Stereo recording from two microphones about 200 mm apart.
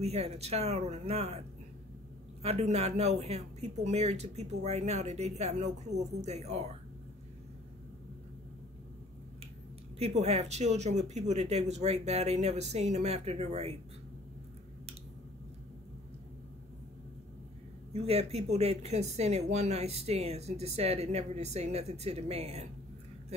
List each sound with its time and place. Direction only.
0.0 s speech: 30° right (ahead or behind)
2.4 s speech: 30° right (ahead or behind)
9.9 s speech: 30° right (ahead or behind)
17.9 s speech: 30° right (ahead or behind)